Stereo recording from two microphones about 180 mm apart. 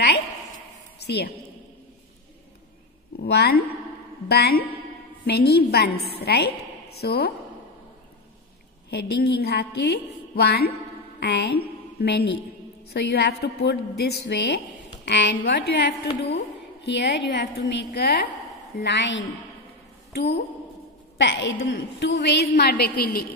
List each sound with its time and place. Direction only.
0.9 s a sound: 65° left (ahead or behind)
3.2 s a woman's voice: 65° left (ahead or behind)
8.9 s a woman's voice: 65° left (ahead or behind)
18.8 s a woman's voice: 85° left
21.2 s a woman's voice: 80° left; by 23.2 s 55° left (ahead or behind)